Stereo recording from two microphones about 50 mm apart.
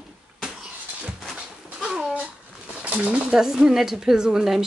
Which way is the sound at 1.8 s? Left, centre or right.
Centre.